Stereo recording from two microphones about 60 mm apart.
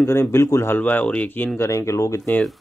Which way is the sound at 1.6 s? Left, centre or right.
Left.